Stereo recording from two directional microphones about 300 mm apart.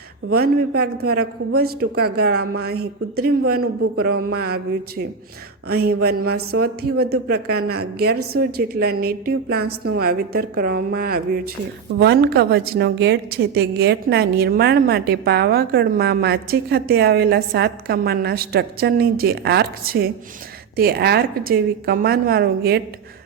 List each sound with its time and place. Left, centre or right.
0.3 s a woman's voice: right
2.3 s speech: right
2.6 s a woman's voice: right
3.6 s speech: right
4.4 s a woman's voice: right